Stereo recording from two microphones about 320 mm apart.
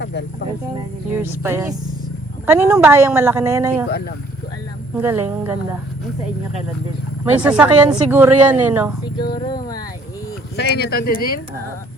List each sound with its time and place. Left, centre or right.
0.0 s music: left
1.1 s a woman's voice: centre
3.8 s speech: left
4.9 s a woman's voice: centre
7.4 s speech: centre
9.3 s speech: centre
10.6 s speech: left